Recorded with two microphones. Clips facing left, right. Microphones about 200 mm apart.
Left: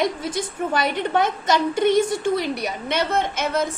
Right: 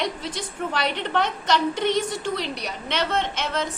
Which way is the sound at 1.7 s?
50° left (ahead or behind).